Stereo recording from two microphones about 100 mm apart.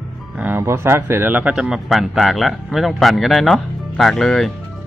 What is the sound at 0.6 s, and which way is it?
Speech, 25° right (ahead or behind).